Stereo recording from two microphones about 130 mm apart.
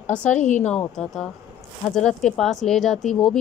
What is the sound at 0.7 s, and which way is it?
A woman's voice, 10° left (ahead or behind).